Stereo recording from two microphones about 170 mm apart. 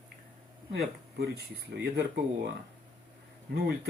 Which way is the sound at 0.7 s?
70° right (ahead or behind).